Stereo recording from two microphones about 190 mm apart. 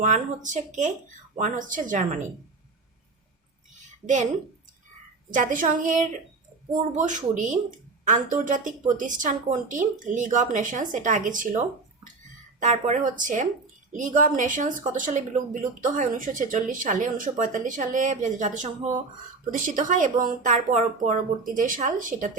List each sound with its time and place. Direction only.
0.0 s speech: 40° right (ahead or behind)
4.0 s speech: 40° right (ahead or behind)
5.3 s speech: 45° right (ahead or behind)